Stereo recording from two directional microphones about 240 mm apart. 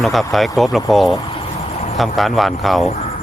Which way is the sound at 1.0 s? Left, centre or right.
Centre.